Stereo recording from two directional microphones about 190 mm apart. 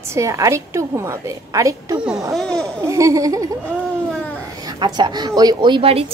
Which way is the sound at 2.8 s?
15° right (ahead or behind).